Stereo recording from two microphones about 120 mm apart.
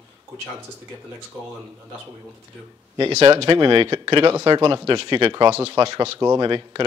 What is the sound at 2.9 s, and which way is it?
Speech, 40° right (ahead or behind).